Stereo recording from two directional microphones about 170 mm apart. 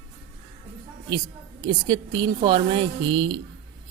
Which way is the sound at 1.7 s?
30° right (ahead or behind).